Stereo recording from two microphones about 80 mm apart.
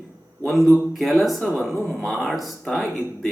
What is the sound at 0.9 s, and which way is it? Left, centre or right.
Speech, centre.